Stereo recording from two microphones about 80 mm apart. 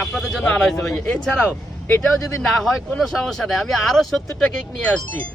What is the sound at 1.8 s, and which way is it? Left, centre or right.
Speech, left.